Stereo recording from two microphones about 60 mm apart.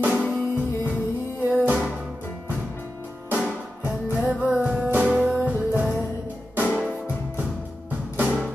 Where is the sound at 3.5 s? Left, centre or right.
Right.